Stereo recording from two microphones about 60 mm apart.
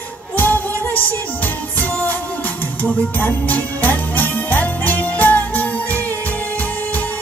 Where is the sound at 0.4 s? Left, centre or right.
Left.